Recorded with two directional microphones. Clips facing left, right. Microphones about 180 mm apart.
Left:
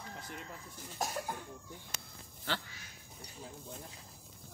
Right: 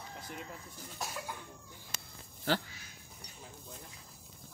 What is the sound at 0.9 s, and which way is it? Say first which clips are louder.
Cough: left 4 dB; 45° left (ahead or behind).